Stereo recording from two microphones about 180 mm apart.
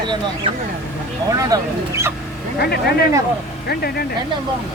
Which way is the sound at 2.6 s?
65° left (ahead or behind).